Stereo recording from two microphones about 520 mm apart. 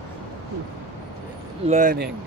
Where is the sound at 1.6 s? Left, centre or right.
Centre.